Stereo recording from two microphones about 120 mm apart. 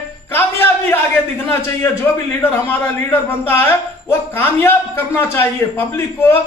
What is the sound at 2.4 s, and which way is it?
A man's voice, 20° left (ahead or behind).